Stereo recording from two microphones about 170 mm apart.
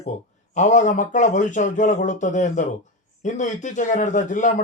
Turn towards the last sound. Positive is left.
turn(degrees=50)  # may be behind; listen again after turning